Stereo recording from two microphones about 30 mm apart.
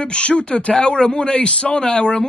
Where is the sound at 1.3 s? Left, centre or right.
Left.